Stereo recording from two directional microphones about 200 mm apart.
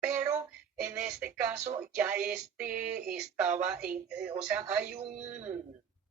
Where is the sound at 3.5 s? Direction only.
40° right (ahead or behind).